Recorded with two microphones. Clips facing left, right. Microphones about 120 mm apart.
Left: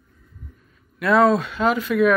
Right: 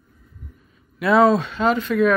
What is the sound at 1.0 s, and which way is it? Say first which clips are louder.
Speech: right 1 dB; centre (ahead or behind).